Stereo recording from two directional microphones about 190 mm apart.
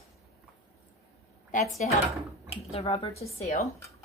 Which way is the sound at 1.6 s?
Centre (ahead or behind).